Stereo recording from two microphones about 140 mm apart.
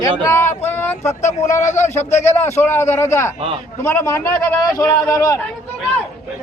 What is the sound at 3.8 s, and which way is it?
A man's voice, 20° left (ahead or behind).